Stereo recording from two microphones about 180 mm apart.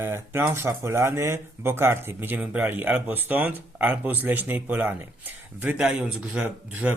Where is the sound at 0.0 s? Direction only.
15° right (ahead or behind).